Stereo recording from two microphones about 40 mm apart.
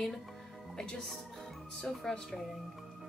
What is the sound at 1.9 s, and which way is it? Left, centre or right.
Speech, centre.